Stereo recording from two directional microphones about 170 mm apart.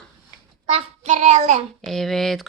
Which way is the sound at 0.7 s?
40° right (ahead or behind).